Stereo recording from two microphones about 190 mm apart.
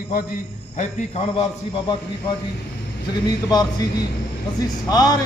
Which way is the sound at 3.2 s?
20° left (ahead or behind).